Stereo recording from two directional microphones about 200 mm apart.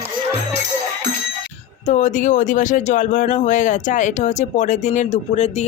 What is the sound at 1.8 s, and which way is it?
Speech, 35° left (ahead or behind).